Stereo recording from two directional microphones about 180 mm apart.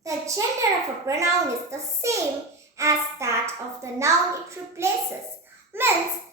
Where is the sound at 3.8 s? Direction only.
15° right (ahead or behind).